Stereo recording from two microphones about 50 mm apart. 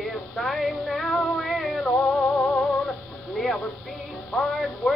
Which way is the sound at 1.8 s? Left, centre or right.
Centre.